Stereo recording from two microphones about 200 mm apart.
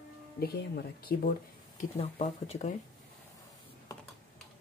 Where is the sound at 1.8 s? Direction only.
35° left (ahead or behind).